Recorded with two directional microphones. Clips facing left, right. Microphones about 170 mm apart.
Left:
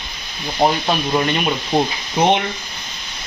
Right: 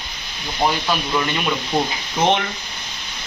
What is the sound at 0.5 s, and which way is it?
Speech, 30° left (ahead or behind).